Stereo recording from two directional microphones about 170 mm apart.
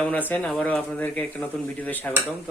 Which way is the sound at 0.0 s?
10° left (ahead or behind).